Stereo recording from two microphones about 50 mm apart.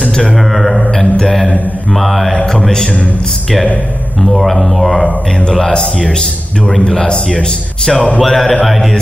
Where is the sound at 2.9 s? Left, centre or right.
Left.